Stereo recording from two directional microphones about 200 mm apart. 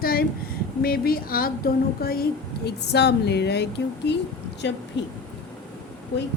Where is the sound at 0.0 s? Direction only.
50° left (ahead or behind).